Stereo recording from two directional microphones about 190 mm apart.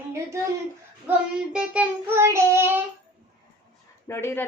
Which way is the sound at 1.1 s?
10° right (ahead or behind).